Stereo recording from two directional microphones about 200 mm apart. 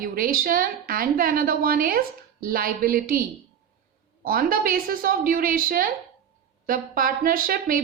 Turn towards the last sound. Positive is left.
turn(degrees=-45)  # may be behind; listen again after turning